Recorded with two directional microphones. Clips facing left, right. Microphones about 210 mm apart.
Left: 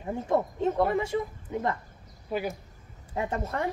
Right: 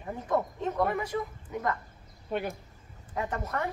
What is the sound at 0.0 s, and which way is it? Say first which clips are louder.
Speech: left 3 dB; 25° left (ahead or behind).